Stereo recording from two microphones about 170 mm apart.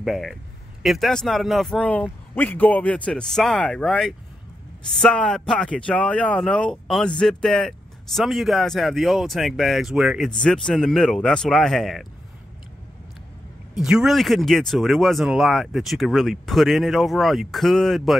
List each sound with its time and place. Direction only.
0.0 s speech: centre (ahead or behind)
13.7 s speech: 5° right (ahead or behind)